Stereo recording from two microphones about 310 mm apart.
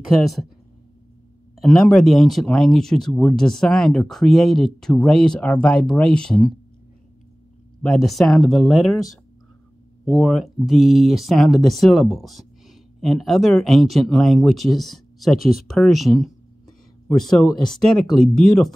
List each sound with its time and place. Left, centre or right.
1.6 s speech: centre
8.0 s speech: centre